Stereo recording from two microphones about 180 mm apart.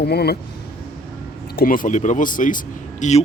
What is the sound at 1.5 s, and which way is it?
Speech, 55° left (ahead or behind).